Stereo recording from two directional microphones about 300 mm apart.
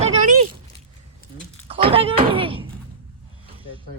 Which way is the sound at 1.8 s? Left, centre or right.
Centre.